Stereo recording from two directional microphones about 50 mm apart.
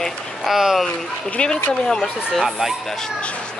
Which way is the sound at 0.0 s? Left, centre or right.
Centre.